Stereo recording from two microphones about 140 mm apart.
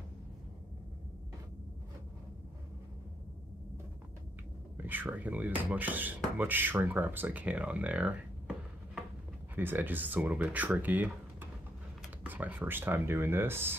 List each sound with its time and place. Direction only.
4.7 s speech: 15° right (ahead or behind)
9.6 s speech: 15° right (ahead or behind)